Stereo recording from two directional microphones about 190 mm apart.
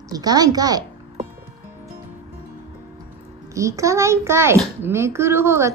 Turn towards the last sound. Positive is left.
turn(degrees=-15)  # may be behind; listen again after turning